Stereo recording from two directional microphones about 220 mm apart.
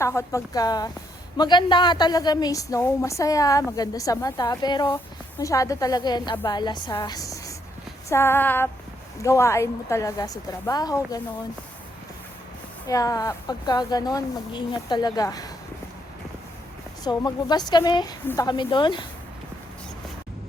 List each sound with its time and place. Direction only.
0.0 s a woman's voice: 15° left (ahead or behind)
12.9 s a woman's voice: 15° left (ahead or behind)
17.0 s speech: 20° left (ahead or behind)